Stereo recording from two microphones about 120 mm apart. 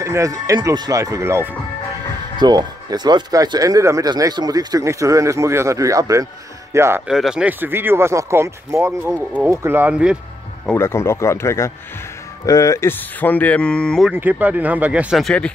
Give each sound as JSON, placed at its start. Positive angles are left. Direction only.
{"t": 0.0, "sound": "speech", "side_deg": -25}
{"t": 2.3, "sound": "speech", "side_deg": -35}
{"t": 7.1, "sound": "speech", "side_deg": -5}
{"t": 9.0, "sound": "speech", "side_deg": -10}
{"t": 9.5, "sound": "speech", "side_deg": -20}
{"t": 10.7, "sound": "speech", "side_deg": 20}
{"t": 14.1, "sound": "speech", "side_deg": -15}
{"t": 15.2, "sound": "speech", "side_deg": 10}